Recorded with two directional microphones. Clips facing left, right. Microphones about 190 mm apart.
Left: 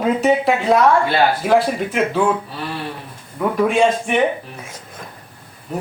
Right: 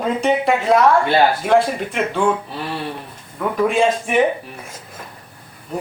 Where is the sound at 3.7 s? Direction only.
Centre (ahead or behind).